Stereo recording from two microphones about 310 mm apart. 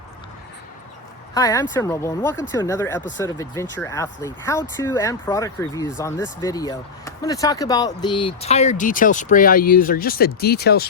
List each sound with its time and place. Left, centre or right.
1.3 s speech: centre; by 10.8 s left